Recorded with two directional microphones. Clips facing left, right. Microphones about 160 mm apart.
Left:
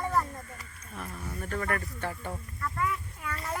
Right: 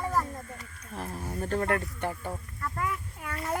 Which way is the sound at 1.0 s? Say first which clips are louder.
Right 4 dB; 35° right (ahead or behind).